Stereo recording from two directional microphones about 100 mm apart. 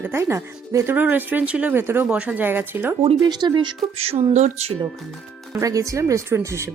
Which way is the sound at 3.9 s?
85° right.